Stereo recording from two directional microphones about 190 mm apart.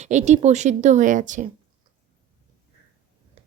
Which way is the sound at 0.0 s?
35° right (ahead or behind).